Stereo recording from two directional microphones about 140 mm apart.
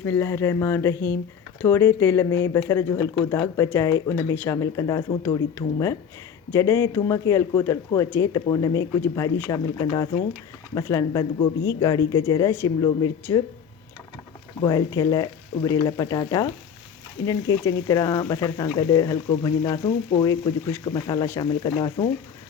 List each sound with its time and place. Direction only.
0.0 s speech: 15° left (ahead or behind)
10.8 s speech: 25° left (ahead or behind)
14.6 s speech: 25° left (ahead or behind)